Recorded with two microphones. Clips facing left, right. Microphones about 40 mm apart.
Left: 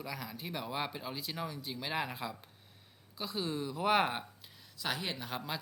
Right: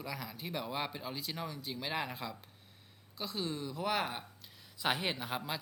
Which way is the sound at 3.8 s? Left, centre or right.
Left.